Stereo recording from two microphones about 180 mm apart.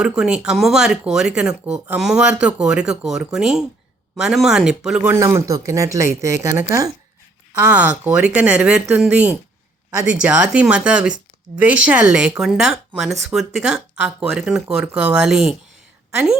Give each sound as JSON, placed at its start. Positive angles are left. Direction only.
{"t": 0.0, "sound": "speech", "side_deg": -5}
{"t": 5.2, "sound": "speech", "side_deg": -20}